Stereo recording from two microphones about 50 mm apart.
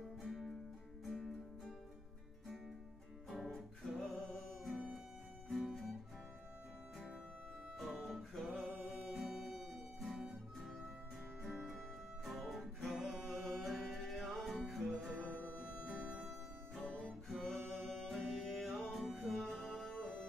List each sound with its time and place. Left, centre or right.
0.2 s music: centre
3.3 s music: centre
7.8 s music: centre
13.5 s music: centre
15.1 s music: right
16.3 s music: centre